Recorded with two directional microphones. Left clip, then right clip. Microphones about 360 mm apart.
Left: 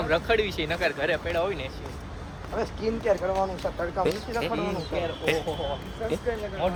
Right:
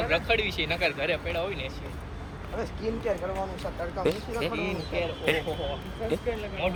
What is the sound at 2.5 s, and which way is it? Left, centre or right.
Speech, left.